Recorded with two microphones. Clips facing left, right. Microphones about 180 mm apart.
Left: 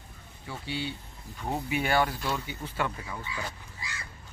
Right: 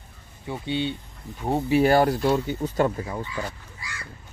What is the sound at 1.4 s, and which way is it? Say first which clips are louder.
Speech: right 10 dB; 35° right (ahead or behind).